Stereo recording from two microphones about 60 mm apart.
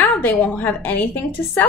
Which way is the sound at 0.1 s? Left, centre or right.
Left.